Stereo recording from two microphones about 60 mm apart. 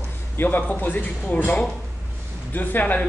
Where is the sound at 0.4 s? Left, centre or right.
Left.